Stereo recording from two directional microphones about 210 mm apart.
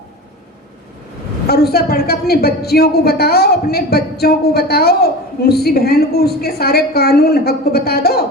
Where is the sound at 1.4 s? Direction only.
50° left (ahead or behind).